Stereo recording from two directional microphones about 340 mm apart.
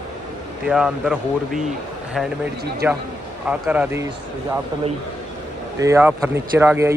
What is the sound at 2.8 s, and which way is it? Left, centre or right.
Speech, centre.